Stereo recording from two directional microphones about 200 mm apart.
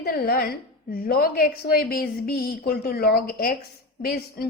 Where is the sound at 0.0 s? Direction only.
50° left (ahead or behind).